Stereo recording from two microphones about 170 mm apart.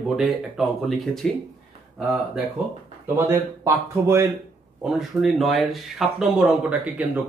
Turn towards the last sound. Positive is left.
turn(degrees=-5)  # may be behind; listen again after turning